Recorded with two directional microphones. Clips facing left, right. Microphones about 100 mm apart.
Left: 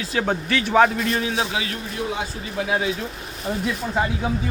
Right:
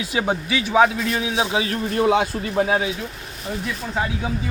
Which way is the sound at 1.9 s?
65° right (ahead or behind).